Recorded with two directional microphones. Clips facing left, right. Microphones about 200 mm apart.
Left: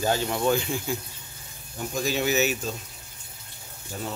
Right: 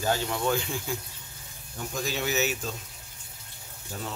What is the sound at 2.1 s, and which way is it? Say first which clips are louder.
Speech: left 4 dB; 10° left (ahead or behind).